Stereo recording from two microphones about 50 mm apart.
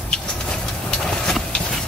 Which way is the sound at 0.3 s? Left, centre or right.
Centre.